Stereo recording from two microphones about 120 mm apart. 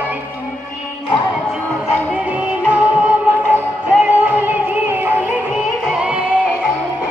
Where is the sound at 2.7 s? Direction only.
15° right (ahead or behind).